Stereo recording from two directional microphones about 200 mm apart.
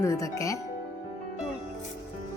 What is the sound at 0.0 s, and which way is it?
Speech, 15° left (ahead or behind).